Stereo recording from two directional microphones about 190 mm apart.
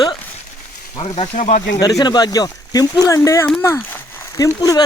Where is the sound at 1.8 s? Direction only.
20° left (ahead or behind).